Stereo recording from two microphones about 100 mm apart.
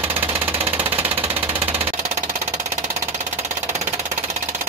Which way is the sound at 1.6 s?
25° right (ahead or behind).